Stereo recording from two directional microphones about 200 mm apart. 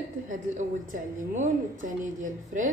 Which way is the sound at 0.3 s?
40° right (ahead or behind).